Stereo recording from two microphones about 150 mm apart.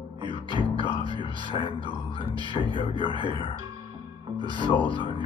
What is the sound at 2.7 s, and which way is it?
Speech, 35° left (ahead or behind).